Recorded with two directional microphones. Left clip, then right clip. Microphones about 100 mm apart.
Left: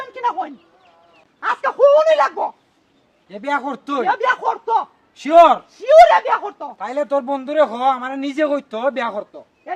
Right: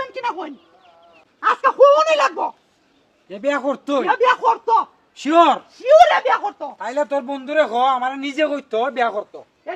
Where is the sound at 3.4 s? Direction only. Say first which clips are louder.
Right 1 dB; 30° left (ahead or behind).